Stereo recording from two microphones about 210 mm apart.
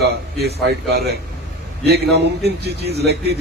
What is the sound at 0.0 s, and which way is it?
Speech, 50° right (ahead or behind).